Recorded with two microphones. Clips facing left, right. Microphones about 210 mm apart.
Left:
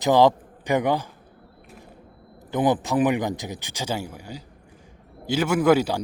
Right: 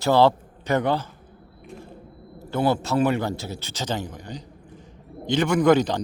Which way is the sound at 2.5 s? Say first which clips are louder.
Left 1 dB; 15° left (ahead or behind).